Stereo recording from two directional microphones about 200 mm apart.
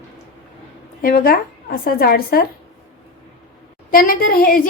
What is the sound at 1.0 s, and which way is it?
A woman's voice, 45° left (ahead or behind).